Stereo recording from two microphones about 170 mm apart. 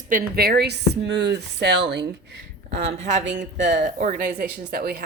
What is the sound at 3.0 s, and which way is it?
A woman's voice, 45° right (ahead or behind).